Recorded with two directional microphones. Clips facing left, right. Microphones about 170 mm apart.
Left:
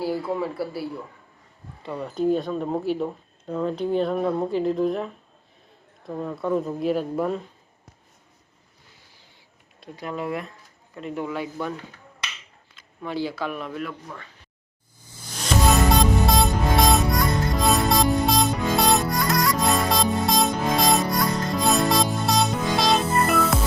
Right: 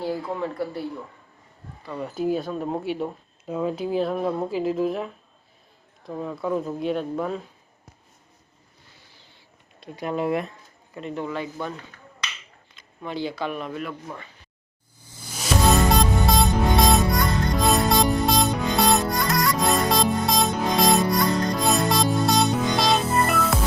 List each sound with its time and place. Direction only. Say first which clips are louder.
0.0 s speech: left 2 dB; 5° left (ahead or behind)
2.0 s speech: left 2 dB; 5° right (ahead or behind)
10.0 s speech: right 4 dB; 20° right (ahead or behind)
11.0 s a man's voice: even; 5° left (ahead or behind)
13.0 s speech: left 1 dB; 5° left (ahead or behind)
15.4 s music: even; 5° right (ahead or behind)